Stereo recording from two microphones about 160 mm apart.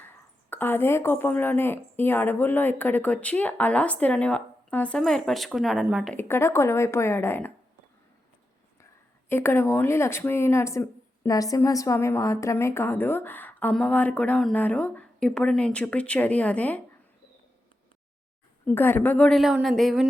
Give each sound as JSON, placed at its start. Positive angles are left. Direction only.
{"t": 0.5, "sound": "speech", "side_deg": 10}
{"t": 6.1, "sound": "speech", "side_deg": 15}
{"t": 9.3, "sound": "speech", "side_deg": 15}
{"t": 18.6, "sound": "a woman's voice", "side_deg": 10}